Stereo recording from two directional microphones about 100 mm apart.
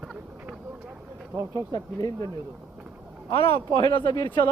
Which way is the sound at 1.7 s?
40° left (ahead or behind).